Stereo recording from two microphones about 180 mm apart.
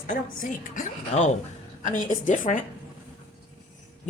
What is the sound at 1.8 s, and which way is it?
Speech, 45° left (ahead or behind).